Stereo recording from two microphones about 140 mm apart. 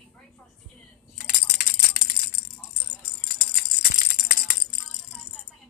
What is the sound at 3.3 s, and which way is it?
Music, 90° left.